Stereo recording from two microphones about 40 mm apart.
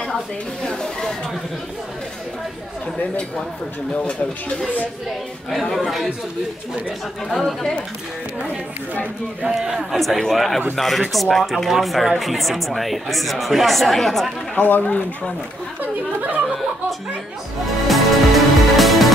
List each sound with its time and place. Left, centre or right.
0.7 s speech: centre
3.9 s speech: left
5.5 s speech: centre
9.4 s a man's voice: centre
9.9 s speech: centre
14.6 s speech: left
15.8 s speech: right
17.6 s music: centre